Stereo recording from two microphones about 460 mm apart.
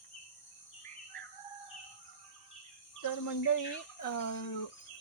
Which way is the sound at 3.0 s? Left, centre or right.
Left.